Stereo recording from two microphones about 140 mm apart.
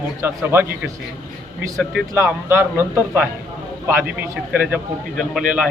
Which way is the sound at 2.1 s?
15° right (ahead or behind).